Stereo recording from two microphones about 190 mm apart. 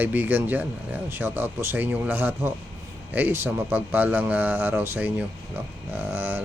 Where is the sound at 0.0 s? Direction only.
10° right (ahead or behind).